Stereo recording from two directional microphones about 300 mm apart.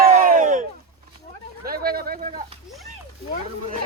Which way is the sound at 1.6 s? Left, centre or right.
Right.